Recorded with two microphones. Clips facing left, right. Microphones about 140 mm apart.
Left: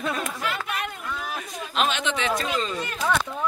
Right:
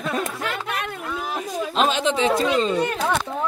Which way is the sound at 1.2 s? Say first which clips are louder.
Right 7 dB; 30° right (ahead or behind).